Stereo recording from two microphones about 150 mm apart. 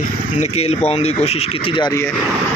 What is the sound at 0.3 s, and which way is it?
Speech, 45° left (ahead or behind).